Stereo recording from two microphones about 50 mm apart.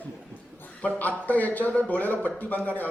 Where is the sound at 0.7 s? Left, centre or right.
Left.